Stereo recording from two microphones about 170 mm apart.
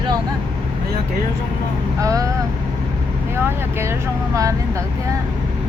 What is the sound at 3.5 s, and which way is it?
Speech, 15° right (ahead or behind).